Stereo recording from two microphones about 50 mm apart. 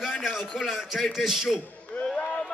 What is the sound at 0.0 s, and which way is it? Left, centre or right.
A man's voice, centre.